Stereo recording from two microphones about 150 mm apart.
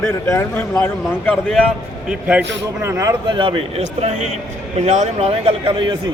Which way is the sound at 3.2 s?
35° right (ahead or behind).